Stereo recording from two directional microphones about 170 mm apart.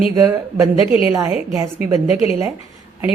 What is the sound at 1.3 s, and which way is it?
Speech, 15° right (ahead or behind).